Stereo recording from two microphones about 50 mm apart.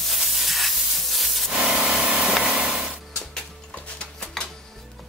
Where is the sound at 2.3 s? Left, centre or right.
Centre.